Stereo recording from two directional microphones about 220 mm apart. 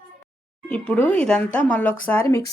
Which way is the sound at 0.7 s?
5° left (ahead or behind).